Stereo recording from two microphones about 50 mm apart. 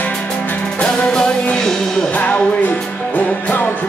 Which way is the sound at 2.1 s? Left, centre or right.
Left.